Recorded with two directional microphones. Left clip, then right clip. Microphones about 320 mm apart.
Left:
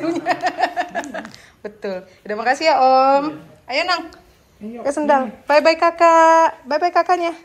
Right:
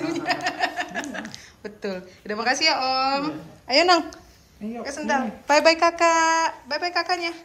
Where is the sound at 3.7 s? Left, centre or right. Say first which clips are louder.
Right 2 dB; centre.